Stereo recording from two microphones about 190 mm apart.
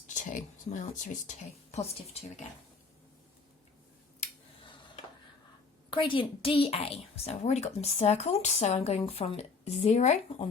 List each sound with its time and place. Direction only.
0.1 s a woman's voice: 45° left (ahead or behind)
4.2 s a sound: 25° left (ahead or behind)
5.9 s a woman's voice: 25° left (ahead or behind)